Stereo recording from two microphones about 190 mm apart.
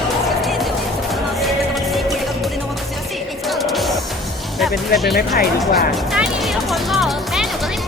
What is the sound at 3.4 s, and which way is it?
Music, centre (ahead or behind).